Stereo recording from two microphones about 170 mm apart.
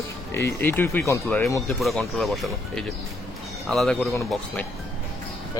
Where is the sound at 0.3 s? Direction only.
15° left (ahead or behind).